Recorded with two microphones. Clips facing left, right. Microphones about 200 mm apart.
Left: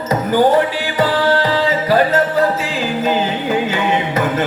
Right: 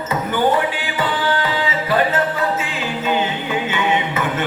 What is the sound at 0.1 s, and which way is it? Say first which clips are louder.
Music: left 5 dB; 40° left (ahead or behind).